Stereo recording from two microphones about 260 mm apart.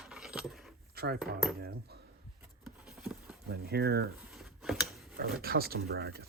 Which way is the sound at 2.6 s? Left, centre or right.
Centre.